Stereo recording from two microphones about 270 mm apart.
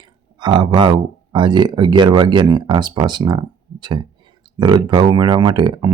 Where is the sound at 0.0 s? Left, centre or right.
Centre.